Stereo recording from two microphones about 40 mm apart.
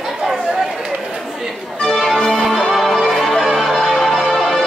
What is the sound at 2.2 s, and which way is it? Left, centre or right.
Music, centre.